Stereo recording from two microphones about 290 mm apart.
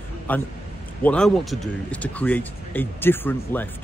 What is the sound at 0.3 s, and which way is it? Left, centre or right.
Speech, centre.